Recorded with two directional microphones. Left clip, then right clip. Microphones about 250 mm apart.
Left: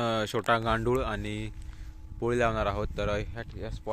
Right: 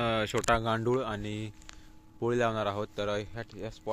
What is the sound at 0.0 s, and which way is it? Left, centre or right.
Speech, centre.